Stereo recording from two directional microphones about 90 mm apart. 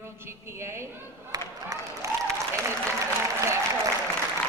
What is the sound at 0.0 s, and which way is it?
Speech, 30° right (ahead or behind).